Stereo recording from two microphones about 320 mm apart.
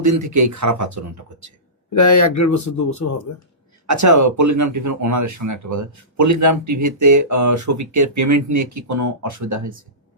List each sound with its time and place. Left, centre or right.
0.0 s speech: right
2.0 s speech: left
3.8 s speech: right